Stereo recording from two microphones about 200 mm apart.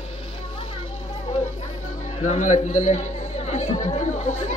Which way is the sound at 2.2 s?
35° left (ahead or behind).